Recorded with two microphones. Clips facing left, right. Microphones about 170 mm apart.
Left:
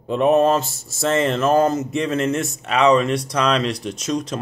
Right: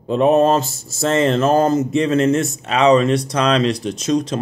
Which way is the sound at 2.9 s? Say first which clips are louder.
Right 3 dB; 35° right (ahead or behind).